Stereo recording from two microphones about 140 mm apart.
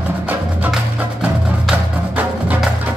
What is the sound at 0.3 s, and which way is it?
Music, 10° right (ahead or behind).